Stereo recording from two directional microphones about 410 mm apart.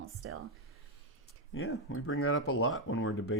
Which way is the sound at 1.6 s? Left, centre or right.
Left.